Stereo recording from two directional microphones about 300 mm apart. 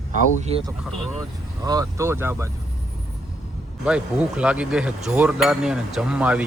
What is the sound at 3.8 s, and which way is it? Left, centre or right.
Speech, centre.